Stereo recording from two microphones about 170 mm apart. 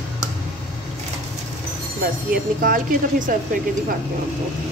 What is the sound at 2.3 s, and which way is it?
Speech, 55° right (ahead or behind).